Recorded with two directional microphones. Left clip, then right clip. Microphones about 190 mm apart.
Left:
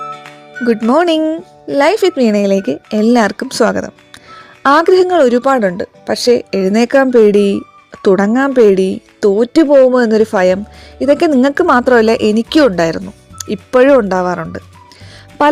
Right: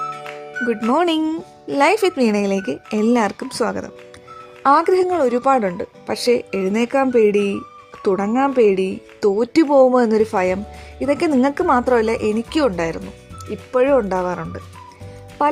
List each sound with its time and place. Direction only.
0.0 s music: centre (ahead or behind)
0.7 s a woman's voice: 25° left (ahead or behind)
13.4 s speech: 40° left (ahead or behind)
14.1 s a woman's voice: 25° left (ahead or behind)